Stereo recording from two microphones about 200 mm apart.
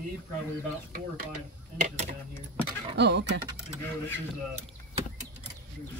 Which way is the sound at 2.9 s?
60° right (ahead or behind).